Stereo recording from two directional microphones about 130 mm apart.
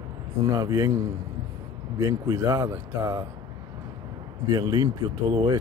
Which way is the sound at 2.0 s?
25° right (ahead or behind).